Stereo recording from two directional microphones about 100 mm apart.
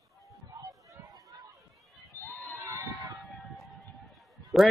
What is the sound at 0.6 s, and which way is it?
Run, 35° right (ahead or behind).